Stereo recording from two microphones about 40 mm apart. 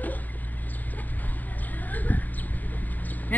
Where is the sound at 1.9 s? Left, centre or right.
Left.